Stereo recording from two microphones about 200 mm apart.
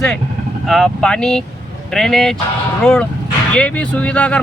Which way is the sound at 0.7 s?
Centre (ahead or behind).